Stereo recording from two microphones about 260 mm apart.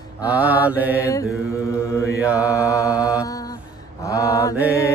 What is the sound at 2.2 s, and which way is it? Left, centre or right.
Mantra, centre.